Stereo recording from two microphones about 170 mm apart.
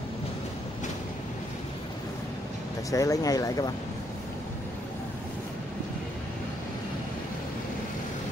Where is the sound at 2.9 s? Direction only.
20° left (ahead or behind).